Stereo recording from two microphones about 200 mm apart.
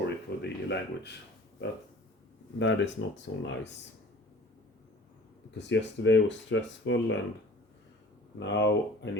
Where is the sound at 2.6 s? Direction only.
70° left (ahead or behind).